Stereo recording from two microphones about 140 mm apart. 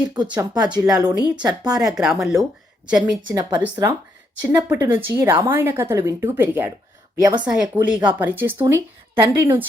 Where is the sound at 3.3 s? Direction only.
30° right (ahead or behind); by 5.3 s 15° right (ahead or behind).